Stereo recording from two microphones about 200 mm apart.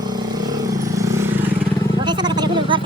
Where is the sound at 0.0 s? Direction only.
20° right (ahead or behind).